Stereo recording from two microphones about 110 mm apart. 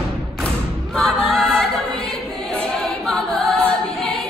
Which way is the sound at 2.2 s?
5° left (ahead or behind).